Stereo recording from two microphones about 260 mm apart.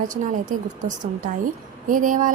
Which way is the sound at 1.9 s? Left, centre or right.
Right.